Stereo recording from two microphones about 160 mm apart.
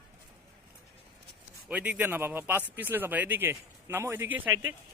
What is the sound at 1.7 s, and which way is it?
Speech, 10° right (ahead or behind).